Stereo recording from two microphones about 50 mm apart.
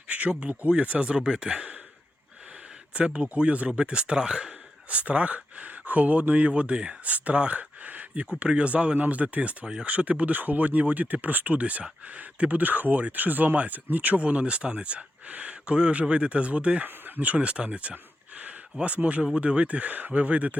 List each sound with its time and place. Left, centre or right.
0.1 s speech: right
2.9 s speech: right
8.3 s speech: right
17.9 s a sound: right
19.0 s speech: right